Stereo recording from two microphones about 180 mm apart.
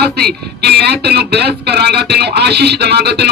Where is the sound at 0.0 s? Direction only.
60° right (ahead or behind).